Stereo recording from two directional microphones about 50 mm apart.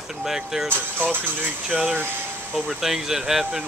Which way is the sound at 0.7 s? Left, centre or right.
Left.